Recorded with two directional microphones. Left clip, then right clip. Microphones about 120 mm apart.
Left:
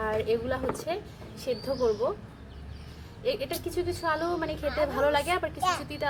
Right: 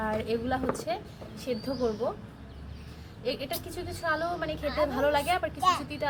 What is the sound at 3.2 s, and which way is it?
A woman's voice, 20° left (ahead or behind).